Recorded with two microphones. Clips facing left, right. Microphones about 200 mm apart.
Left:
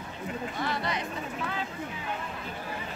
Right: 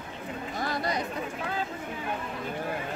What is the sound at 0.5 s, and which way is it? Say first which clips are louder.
Chatter: right 4 dB; 40° right (ahead or behind).